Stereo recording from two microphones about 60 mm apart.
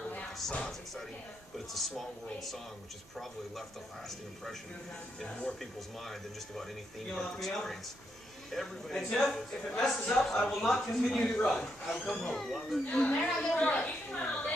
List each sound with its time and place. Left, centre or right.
1.7 s speech: centre
5.6 s a man's voice: centre
12.8 s a woman's voice: centre